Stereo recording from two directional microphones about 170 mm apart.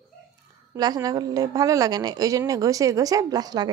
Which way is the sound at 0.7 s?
20° right (ahead or behind).